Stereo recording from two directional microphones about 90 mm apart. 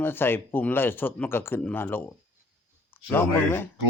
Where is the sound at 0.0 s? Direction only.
25° left (ahead or behind).